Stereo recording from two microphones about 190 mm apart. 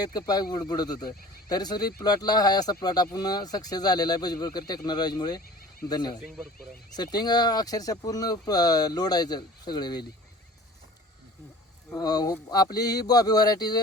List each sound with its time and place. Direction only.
0.0 s speech: 20° left (ahead or behind)
11.9 s speech: 20° left (ahead or behind)